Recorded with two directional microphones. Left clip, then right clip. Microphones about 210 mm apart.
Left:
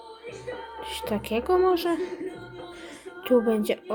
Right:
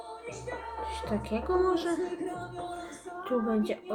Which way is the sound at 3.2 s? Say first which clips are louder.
Left 8 dB; 35° left (ahead or behind).